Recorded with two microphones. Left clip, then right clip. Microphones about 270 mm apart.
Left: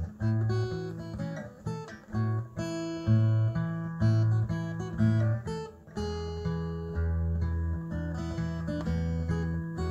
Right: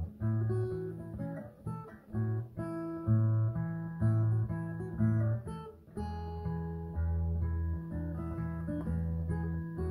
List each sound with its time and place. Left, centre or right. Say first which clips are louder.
0.2 s music: left 3 dB; left
8.1 s music: left 4 dB; left